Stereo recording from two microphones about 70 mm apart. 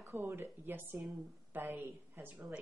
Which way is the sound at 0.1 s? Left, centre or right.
Right.